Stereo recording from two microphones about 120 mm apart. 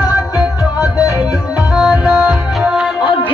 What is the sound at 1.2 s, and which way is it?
Music, 10° right (ahead or behind).